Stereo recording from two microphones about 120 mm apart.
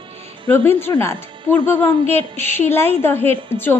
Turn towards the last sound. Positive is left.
turn(degrees=20)  # may be behind; listen again after turning